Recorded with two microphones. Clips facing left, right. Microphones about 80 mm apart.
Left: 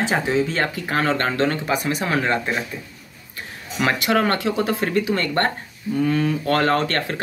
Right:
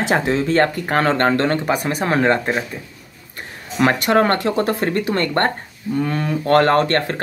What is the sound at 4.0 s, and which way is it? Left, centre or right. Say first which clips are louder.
Speech: right 4 dB; right.